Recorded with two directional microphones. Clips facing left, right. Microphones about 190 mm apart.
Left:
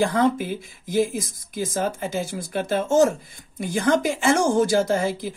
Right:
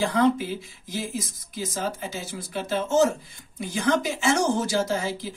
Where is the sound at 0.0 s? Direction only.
55° left (ahead or behind).